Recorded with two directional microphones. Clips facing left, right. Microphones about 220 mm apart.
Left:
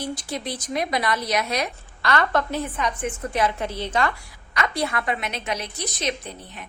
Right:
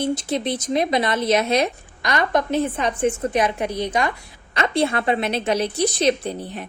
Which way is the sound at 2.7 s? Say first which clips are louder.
Right 6 dB; 30° right (ahead or behind).